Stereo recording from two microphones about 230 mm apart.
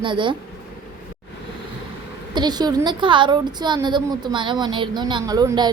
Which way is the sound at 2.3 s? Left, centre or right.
Centre.